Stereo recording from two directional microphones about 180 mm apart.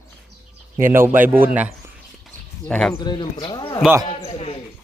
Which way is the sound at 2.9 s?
25° left (ahead or behind).